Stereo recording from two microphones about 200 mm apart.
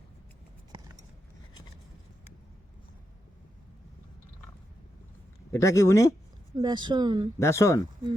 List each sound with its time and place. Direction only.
5.5 s speech: 15° left (ahead or behind)
6.6 s speech: 20° right (ahead or behind)
7.3 s speech: 15° left (ahead or behind)